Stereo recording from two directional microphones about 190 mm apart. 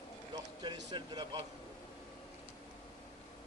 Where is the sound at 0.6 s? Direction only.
25° right (ahead or behind).